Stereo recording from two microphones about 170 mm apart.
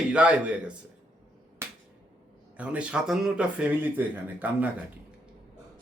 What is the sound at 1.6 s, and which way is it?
Finger snapping, 15° right (ahead or behind).